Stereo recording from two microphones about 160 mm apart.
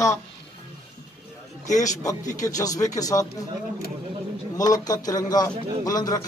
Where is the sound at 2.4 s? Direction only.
20° left (ahead or behind).